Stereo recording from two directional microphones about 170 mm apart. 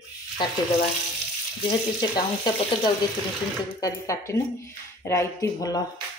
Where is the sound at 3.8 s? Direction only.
20° left (ahead or behind).